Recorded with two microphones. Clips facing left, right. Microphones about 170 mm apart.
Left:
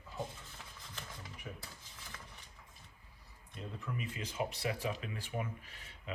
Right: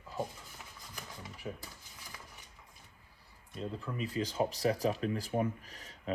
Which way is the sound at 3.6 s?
35° right (ahead or behind).